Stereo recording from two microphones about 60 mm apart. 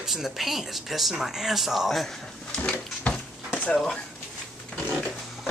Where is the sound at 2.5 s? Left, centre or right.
Left.